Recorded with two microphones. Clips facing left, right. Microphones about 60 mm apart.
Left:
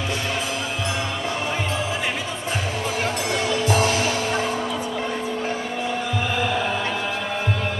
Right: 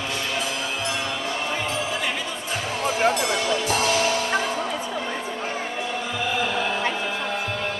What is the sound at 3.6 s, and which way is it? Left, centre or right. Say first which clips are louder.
Music: left 3 dB; left.